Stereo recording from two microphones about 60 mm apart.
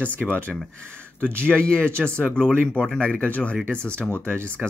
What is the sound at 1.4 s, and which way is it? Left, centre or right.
Speech, centre.